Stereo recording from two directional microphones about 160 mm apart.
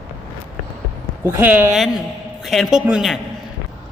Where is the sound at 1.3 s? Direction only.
10° right (ahead or behind).